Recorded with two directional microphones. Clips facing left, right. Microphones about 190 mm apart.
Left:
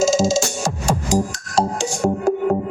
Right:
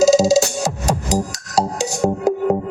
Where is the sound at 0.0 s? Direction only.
35° right (ahead or behind).